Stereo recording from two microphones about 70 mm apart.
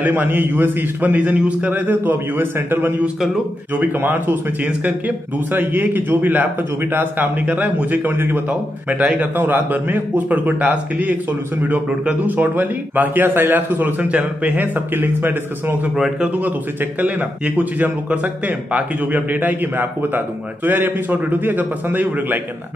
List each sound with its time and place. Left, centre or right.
0.0 s speech: right
17.6 s speech: right